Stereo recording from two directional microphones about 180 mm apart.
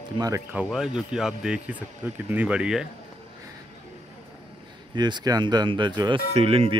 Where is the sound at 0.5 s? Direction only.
5° right (ahead or behind).